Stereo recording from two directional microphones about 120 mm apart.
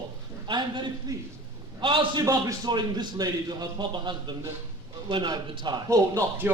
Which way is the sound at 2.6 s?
40° right (ahead or behind).